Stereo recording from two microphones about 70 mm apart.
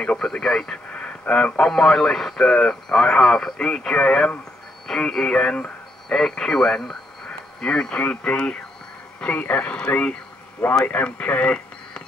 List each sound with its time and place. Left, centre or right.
0.0 s speech: centre